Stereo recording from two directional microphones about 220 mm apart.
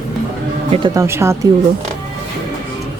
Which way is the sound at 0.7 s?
20° right (ahead or behind).